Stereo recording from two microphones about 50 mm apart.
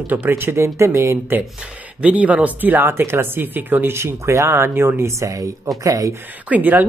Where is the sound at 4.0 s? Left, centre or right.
Right.